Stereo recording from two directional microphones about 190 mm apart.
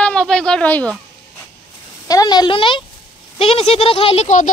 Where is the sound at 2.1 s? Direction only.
20° left (ahead or behind); by 4.5 s 40° left (ahead or behind).